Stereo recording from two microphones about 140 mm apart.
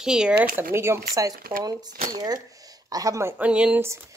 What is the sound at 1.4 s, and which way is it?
Speech, 90° right.